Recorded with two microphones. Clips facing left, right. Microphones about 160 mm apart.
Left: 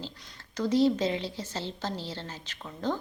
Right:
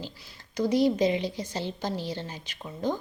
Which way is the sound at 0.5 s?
15° right (ahead or behind).